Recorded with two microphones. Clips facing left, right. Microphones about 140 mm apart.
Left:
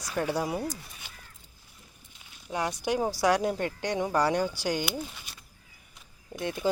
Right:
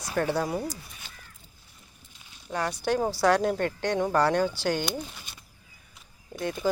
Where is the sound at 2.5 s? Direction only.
15° left (ahead or behind).